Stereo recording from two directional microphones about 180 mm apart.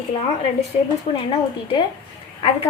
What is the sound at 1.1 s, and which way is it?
Speech, 35° left (ahead or behind).